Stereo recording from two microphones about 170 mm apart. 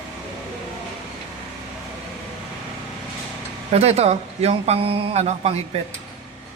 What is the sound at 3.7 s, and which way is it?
A man's voice, 40° right (ahead or behind).